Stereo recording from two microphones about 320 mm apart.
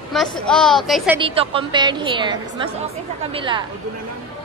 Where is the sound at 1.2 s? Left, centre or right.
Centre.